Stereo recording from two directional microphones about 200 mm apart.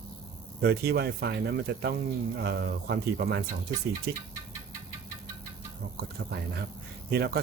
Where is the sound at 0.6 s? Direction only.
55° right (ahead or behind).